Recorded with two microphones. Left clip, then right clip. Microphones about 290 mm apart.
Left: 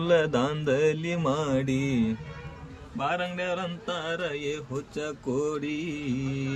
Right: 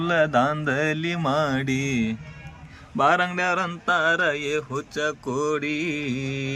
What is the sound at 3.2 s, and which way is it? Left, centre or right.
Speech, centre.